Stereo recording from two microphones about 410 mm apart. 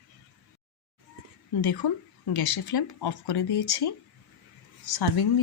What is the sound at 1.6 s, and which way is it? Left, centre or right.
Speech, left.